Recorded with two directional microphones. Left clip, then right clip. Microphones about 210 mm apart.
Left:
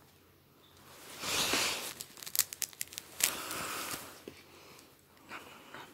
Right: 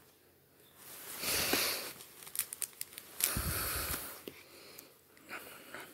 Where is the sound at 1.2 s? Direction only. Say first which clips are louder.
Left 2 dB; 10° left (ahead or behind).